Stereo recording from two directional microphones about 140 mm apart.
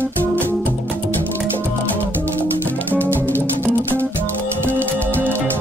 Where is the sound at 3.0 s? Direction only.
10° left (ahead or behind).